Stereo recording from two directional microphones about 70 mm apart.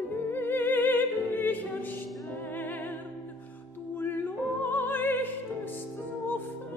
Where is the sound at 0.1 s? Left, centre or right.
Left.